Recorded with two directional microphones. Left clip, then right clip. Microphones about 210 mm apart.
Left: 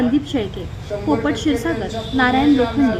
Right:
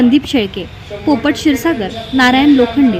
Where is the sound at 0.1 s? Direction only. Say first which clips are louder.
Right 7 dB; 40° right (ahead or behind).